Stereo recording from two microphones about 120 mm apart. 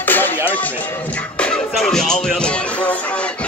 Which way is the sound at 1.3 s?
5° left (ahead or behind).